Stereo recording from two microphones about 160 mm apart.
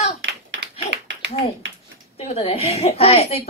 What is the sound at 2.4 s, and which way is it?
A woman's voice, 40° left (ahead or behind).